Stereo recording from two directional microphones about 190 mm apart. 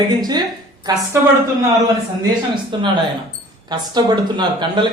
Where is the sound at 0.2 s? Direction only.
20° right (ahead or behind).